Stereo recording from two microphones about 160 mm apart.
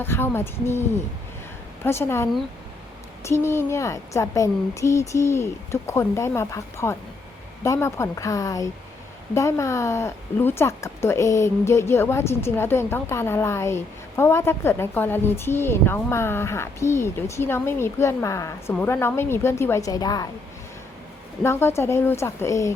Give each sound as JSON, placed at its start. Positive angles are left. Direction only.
{"t": 0.0, "sound": "speech", "side_deg": 15}
{"t": 21.4, "sound": "speech", "side_deg": 15}